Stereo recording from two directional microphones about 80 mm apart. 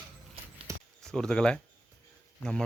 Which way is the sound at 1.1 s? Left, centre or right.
Centre.